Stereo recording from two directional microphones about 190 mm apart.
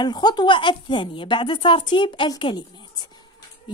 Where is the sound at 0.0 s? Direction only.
20° left (ahead or behind).